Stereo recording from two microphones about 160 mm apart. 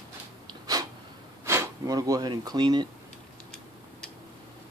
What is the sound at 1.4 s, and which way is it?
Speech, 15° right (ahead or behind).